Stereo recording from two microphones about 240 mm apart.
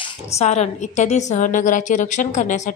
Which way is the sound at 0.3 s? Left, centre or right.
Left.